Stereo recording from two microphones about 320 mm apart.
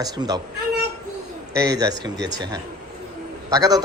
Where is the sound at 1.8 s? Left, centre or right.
Centre.